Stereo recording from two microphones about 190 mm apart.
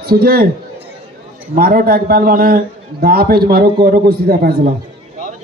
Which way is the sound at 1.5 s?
50° right (ahead or behind).